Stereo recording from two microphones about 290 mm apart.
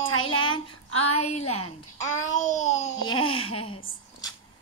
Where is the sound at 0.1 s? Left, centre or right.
Left.